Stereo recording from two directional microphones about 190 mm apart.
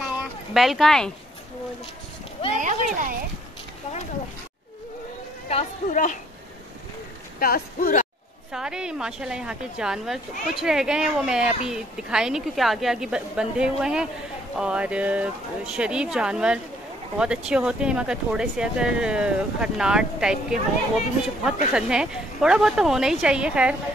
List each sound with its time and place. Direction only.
0.6 s a woman's voice: centre (ahead or behind)
2.5 s speech: 40° right (ahead or behind)
5.5 s speech: 40° left (ahead or behind)
7.3 s speech: 50° left (ahead or behind)
8.5 s a woman's voice: 5° right (ahead or behind)